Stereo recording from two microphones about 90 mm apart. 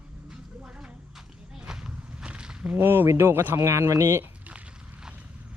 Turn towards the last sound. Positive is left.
turn(degrees=-15)  # may be behind; listen again after turning